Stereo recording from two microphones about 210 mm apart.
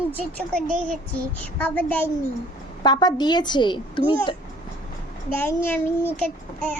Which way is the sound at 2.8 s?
20° left (ahead or behind).